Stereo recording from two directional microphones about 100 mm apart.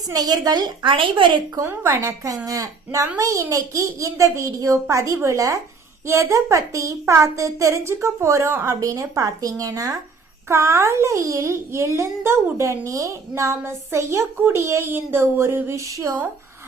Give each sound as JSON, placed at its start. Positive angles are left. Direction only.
{"t": 0.1, "sound": "a woman's voice", "side_deg": -40}
{"t": 1.5, "sound": "a woman's voice", "side_deg": -30}